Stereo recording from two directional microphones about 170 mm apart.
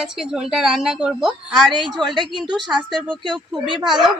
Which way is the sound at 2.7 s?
25° right (ahead or behind).